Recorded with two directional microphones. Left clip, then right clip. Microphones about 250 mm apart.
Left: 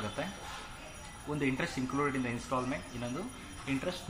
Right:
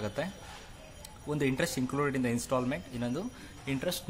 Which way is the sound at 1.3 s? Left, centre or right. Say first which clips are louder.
Right 3 dB; right.